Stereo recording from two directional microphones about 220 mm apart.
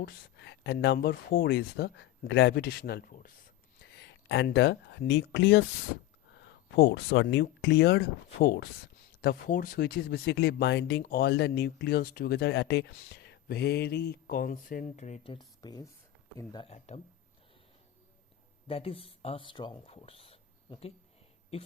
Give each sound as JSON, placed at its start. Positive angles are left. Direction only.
{"t": 0.0, "sound": "speech", "side_deg": 50}
{"t": 18.7, "sound": "speech", "side_deg": 25}